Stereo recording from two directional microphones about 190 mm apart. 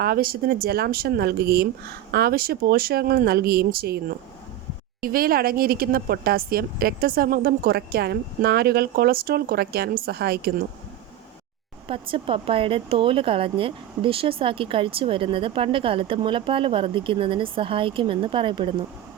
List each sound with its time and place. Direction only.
0.0 s speech: 50° right (ahead or behind)
11.9 s speech: 30° right (ahead or behind)